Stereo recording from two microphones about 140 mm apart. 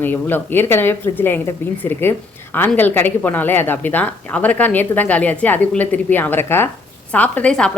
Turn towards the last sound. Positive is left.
turn(degrees=5)  # may be behind; listen again after turning